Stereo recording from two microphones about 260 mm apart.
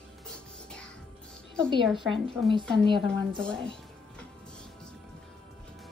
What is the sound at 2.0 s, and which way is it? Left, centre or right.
Speech, centre.